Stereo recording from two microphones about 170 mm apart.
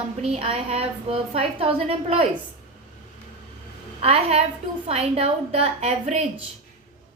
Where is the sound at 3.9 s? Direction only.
35° right (ahead or behind).